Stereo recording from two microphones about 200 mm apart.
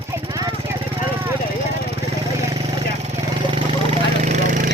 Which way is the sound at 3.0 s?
30° right (ahead or behind).